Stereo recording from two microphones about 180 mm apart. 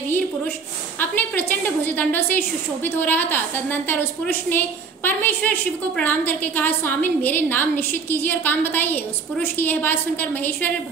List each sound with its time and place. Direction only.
0.9 s a woman's voice: 10° left (ahead or behind)